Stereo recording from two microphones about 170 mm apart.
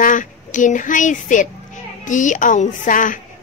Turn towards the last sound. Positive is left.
turn(degrees=50)  # may be behind; listen again after turning